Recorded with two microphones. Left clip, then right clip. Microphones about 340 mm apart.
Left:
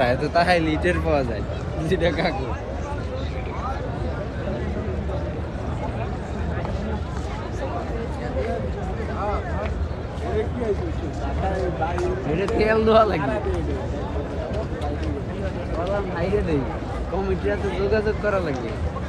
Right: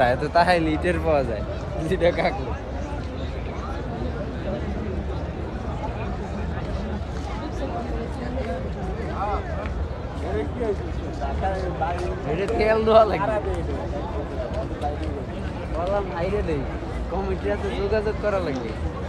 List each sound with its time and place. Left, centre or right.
0.0 s speech: centre; by 2.3 s right
12.3 s speech: right
17.5 s speech: right